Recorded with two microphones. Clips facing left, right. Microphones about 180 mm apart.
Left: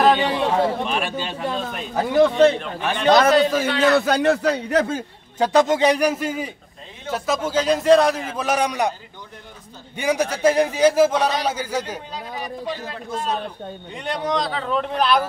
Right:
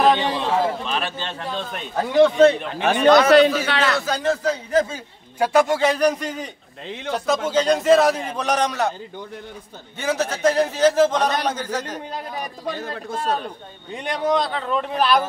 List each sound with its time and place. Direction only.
0.0 s a man's voice: 10° left (ahead or behind)
3.1 s a man's voice: 70° right (ahead or behind)
3.9 s a man's voice: 65° left (ahead or behind)
5.4 s a man's voice: 20° left (ahead or behind)
9.9 s a man's voice: 15° left (ahead or behind)
12.6 s a man's voice: 50° right (ahead or behind)
14.0 s a man's voice: 5° right (ahead or behind)